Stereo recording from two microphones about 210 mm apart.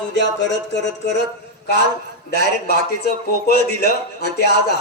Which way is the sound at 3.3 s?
50° left (ahead or behind).